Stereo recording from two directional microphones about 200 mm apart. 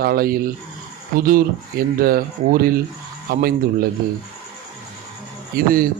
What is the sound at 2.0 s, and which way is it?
A man's voice, 45° right (ahead or behind).